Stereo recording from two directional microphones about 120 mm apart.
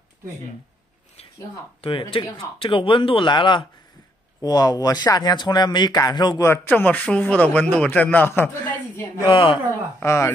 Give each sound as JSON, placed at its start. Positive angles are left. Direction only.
{"t": 1.8, "sound": "speech", "side_deg": 50}
{"t": 6.4, "sound": "a man's voice", "side_deg": 20}
{"t": 9.2, "sound": "speech", "side_deg": 45}
{"t": 9.9, "sound": "speech", "side_deg": 20}